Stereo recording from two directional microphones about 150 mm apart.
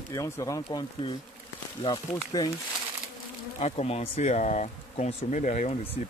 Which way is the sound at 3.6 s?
45° left (ahead or behind).